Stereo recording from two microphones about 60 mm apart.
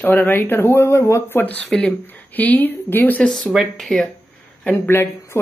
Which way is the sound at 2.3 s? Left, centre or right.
Left.